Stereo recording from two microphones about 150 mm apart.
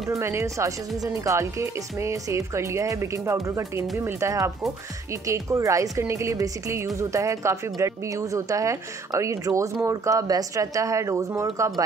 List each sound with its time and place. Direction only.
0.1 s a woman's voice: 20° right (ahead or behind)